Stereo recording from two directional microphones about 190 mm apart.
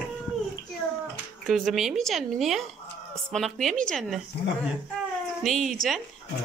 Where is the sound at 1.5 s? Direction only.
Centre (ahead or behind).